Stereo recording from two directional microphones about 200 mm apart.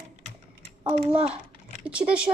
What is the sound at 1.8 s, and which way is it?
Speech, 5° right (ahead or behind).